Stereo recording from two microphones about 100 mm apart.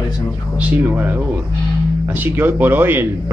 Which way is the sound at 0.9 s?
20° right (ahead or behind).